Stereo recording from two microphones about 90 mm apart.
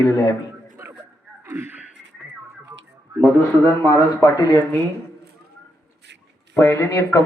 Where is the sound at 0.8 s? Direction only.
30° right (ahead or behind).